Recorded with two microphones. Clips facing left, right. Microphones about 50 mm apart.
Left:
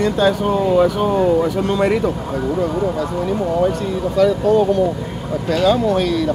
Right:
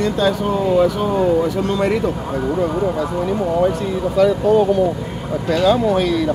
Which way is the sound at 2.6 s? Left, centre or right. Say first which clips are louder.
Right 1 dB; centre.